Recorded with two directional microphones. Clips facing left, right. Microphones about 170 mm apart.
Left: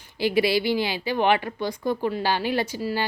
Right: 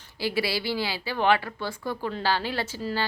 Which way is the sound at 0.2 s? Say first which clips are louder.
Left 6 dB; 20° left (ahead or behind).